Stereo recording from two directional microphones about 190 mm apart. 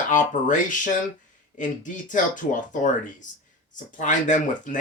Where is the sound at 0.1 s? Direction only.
40° left (ahead or behind).